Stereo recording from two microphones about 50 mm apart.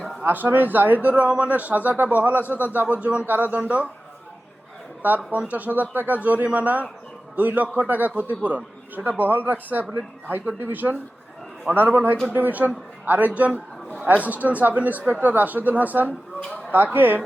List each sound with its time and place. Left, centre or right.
0.3 s a man's voice: right
1.1 s a man's voice: right
3.2 s a man's voice: right
5.0 s a man's voice: right
16.4 s a sound: centre
16.7 s a man's voice: right